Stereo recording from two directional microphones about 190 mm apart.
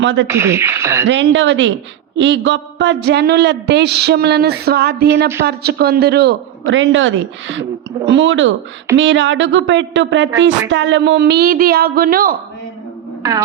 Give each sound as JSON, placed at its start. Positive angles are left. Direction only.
{"t": 0.0, "sound": "speech", "side_deg": -75}
{"t": 0.3, "sound": "speech", "side_deg": -15}
{"t": 1.0, "sound": "a man's voice", "side_deg": -75}